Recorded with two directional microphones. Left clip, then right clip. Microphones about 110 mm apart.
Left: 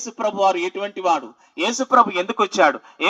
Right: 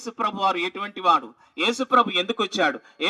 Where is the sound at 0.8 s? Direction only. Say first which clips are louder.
Even; 40° right (ahead or behind).